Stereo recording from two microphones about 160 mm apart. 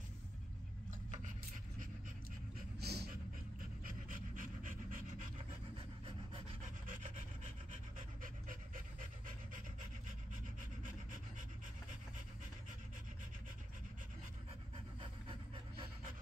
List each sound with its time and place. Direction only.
2.8 s dog: 90° right
3.8 s pant: 60° right (ahead or behind)
5.8 s pant: 35° right (ahead or behind)
6.9 s rub: 55° right (ahead or behind)
8.2 s pant: 55° right (ahead or behind)
15.0 s pant: 30° right (ahead or behind)